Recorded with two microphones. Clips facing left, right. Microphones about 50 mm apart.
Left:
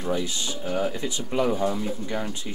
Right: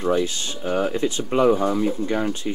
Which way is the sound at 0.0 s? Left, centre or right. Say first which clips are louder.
Right 6 dB; right.